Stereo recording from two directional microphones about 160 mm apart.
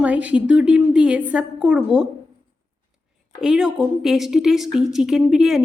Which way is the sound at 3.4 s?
5° right (ahead or behind).